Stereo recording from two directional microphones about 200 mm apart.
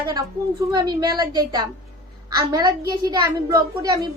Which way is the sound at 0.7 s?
20° right (ahead or behind).